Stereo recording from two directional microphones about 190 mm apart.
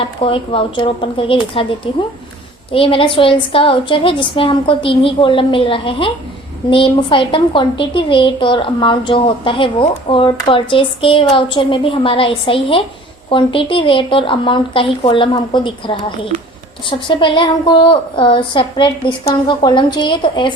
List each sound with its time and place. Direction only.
0.0 s a woman's voice: 30° left (ahead or behind)
16.3 s a woman's voice: 40° right (ahead or behind)
17.1 s a woman's voice: 25° left (ahead or behind)